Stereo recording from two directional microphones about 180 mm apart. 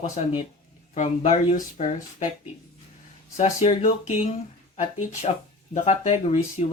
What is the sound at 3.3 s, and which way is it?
Speech, 40° left (ahead or behind).